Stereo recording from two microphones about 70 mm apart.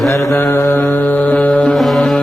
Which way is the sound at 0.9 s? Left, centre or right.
Left.